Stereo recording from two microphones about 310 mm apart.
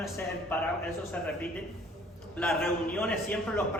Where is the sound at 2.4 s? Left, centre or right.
Centre.